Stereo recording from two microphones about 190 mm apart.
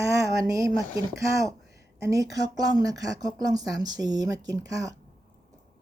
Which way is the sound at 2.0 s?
15° right (ahead or behind).